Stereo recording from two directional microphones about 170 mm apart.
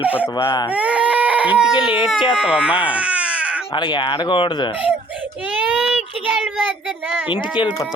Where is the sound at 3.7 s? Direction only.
25° left (ahead or behind).